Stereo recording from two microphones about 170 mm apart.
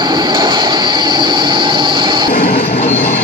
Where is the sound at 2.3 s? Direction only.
65° left (ahead or behind).